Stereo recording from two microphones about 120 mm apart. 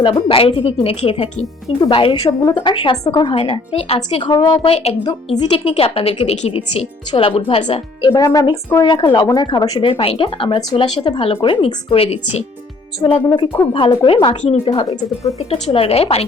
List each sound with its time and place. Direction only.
0.0 s a woman's voice: 45° left (ahead or behind)
4.6 s a woman's voice: 55° left (ahead or behind)
6.5 s a woman's voice: 50° left (ahead or behind)
8.1 s speech: 30° left (ahead or behind)
8.8 s speech: 40° left (ahead or behind)
10.0 s a woman's voice: 50° left (ahead or behind)
14.4 s a woman's voice: 55° left (ahead or behind)
14.8 s speech: 25° left (ahead or behind)
15.7 s a woman's voice: 55° left (ahead or behind)